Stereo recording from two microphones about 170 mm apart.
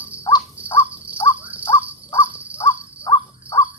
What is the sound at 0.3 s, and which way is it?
Crow, 20° left (ahead or behind).